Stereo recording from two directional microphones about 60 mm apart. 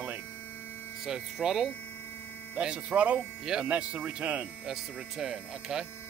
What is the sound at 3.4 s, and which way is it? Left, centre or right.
Speech, centre.